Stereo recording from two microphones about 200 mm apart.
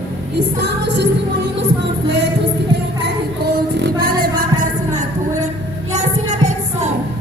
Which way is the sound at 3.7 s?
55° right (ahead or behind).